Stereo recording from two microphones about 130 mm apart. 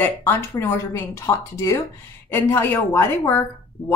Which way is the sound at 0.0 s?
15° left (ahead or behind).